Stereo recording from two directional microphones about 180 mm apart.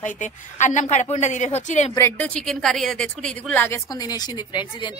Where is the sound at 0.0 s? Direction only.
45° left (ahead or behind).